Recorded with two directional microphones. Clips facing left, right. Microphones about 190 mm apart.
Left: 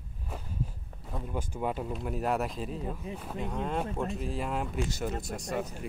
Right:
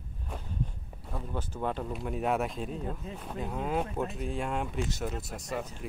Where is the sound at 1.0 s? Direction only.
10° left (ahead or behind).